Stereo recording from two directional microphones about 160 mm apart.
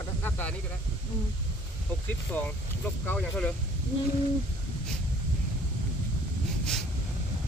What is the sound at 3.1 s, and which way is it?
Speech, 5° left (ahead or behind).